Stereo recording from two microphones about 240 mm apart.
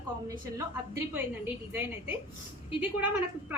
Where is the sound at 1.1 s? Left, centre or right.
Centre.